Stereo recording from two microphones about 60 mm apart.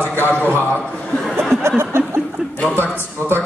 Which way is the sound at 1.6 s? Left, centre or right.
Right.